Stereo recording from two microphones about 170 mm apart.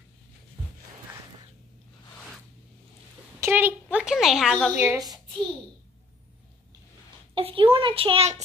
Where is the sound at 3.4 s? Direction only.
10° right (ahead or behind).